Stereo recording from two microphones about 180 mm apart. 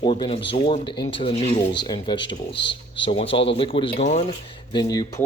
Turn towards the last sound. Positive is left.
turn(degrees=20)  # may be behind; listen again after turning